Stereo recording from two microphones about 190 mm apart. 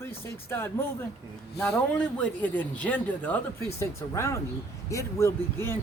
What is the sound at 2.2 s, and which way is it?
Speech, 10° left (ahead or behind).